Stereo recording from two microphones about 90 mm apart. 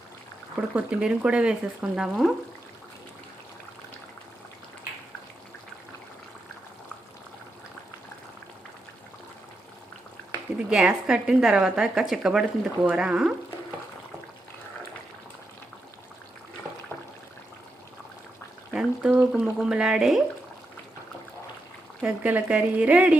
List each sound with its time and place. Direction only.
0.7 s a woman's voice: 10° right (ahead or behind)
10.7 s a woman's voice: 10° right (ahead or behind)
18.7 s a sound: 5° right (ahead or behind)
19.3 s a woman's voice: 5° right (ahead or behind)
22.0 s a woman's voice: 15° right (ahead or behind)